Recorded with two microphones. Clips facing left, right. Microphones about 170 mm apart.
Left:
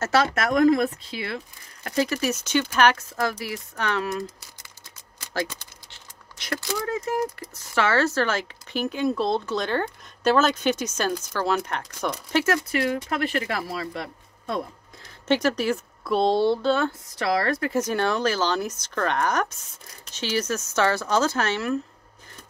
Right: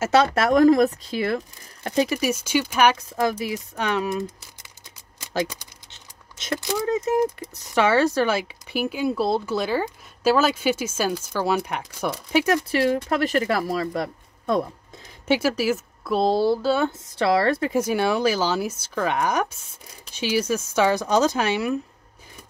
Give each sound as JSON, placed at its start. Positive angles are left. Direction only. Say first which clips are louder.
{"t": 0.1, "sound": "speech", "louder": "right 4 dB", "side_deg": -25}
{"t": 1.8, "sound": "speech", "louder": "right 3 dB", "side_deg": -25}
{"t": 2.0, "sound": "speech", "louder": "right 2 dB", "side_deg": -10}
{"t": 5.3, "sound": "speech", "louder": "right 3 dB", "side_deg": -15}
{"t": 12.7, "sound": "speech", "louder": "right 4 dB", "side_deg": -35}
{"t": 15.2, "sound": "speech", "louder": "right 1 dB", "side_deg": -10}
{"t": 17.2, "sound": "a woman's voice", "louder": "right 4 dB", "side_deg": -25}
{"t": 17.6, "sound": "speech", "louder": "right 2 dB", "side_deg": -10}